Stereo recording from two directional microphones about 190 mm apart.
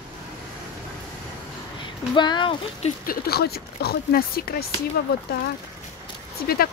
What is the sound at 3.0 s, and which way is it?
Speech, 50° left (ahead or behind).